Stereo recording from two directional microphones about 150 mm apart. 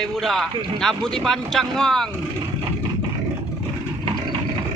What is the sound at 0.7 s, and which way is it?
Speech, 5° left (ahead or behind).